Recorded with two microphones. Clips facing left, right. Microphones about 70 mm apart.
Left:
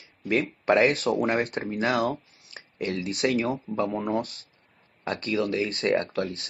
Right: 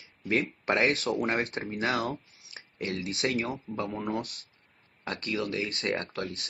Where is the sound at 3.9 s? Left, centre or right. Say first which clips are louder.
Left 5 dB; centre.